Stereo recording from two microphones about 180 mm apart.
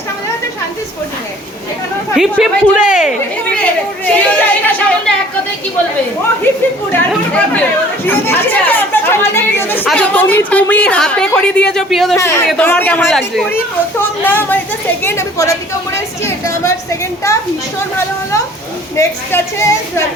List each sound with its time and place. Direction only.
2.1 s a woman's voice: centre (ahead or behind)
3.6 s speech: 10° left (ahead or behind)
7.1 s a woman's voice: 5° left (ahead or behind)
12.1 s speech: 15° left (ahead or behind)
16.0 s a sound: 15° left (ahead or behind)
18.9 s speech: 15° left (ahead or behind)